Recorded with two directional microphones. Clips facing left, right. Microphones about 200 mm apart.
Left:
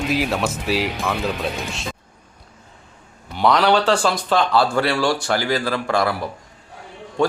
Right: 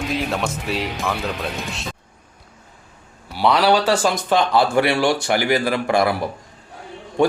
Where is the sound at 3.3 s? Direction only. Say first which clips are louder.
Even; 5° right (ahead or behind).